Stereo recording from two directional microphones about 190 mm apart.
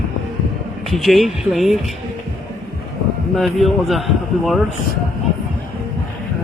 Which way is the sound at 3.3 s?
Centre (ahead or behind).